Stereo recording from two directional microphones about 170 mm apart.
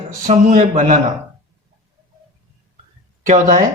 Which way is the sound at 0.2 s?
50° right (ahead or behind).